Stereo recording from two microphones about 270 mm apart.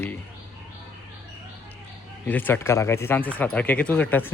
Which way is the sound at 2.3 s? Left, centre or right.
Centre.